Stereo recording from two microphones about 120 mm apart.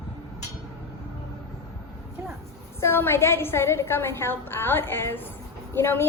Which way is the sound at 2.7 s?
20° left (ahead or behind).